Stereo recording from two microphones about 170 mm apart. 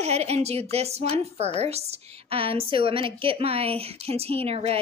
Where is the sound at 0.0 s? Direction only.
40° right (ahead or behind).